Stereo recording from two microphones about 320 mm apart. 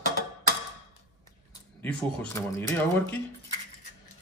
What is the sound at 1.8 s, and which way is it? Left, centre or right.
Speech, centre.